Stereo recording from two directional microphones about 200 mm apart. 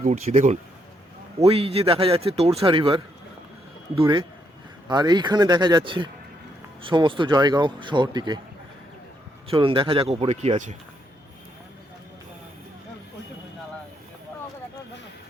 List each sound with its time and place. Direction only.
0.0 s a man's voice: 35° right (ahead or behind)
9.5 s a man's voice: 25° right (ahead or behind)